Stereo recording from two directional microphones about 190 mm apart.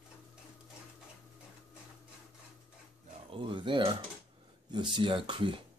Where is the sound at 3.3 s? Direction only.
25° right (ahead or behind).